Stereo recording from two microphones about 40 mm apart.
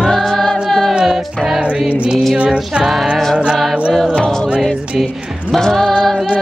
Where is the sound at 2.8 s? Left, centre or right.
Centre.